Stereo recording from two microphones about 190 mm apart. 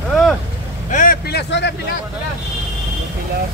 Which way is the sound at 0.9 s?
50° left (ahead or behind).